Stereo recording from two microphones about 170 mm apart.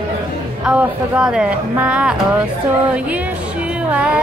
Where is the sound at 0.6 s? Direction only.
5° right (ahead or behind).